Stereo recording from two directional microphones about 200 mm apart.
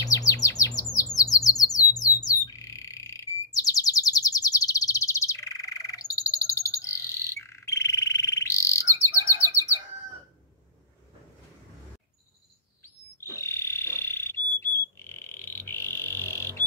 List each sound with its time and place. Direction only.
0.0 s chirp: 15° left (ahead or behind)
2.0 s bird: 20° left (ahead or behind)
12.8 s a sound: 15° left (ahead or behind)